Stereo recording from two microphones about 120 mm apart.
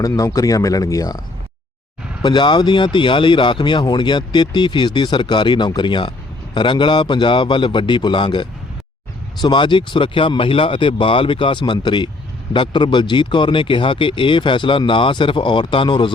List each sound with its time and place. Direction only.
0.0 s speech: 30° left (ahead or behind)
2.2 s speech: 40° left (ahead or behind)